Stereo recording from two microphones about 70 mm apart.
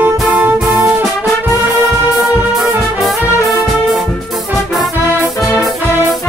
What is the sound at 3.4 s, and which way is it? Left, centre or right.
Music, centre.